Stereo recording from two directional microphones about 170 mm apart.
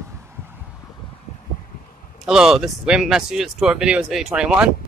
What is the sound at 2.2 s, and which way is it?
Speech, 5° right (ahead or behind).